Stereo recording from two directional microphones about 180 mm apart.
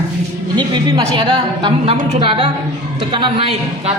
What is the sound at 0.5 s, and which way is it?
A woman's voice, 25° right (ahead or behind).